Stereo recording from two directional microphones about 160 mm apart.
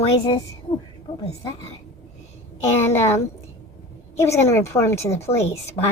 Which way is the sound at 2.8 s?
15° left (ahead or behind).